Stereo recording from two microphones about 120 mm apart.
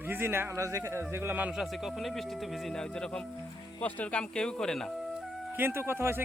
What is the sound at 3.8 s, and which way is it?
Speech, 10° left (ahead or behind).